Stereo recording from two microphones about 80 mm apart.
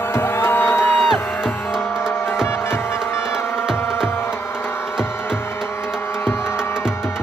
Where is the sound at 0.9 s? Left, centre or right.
Centre.